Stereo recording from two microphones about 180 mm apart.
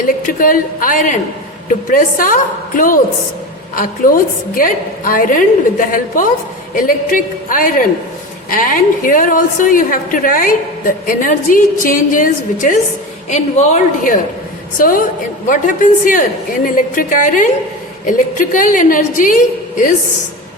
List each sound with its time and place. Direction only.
0.3 s a woman's voice: 50° left (ahead or behind)